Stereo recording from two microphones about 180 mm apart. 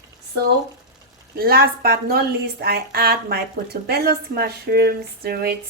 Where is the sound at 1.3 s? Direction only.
55° right (ahead or behind).